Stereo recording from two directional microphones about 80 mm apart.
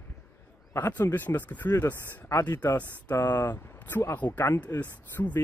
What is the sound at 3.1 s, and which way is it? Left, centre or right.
Speech, left.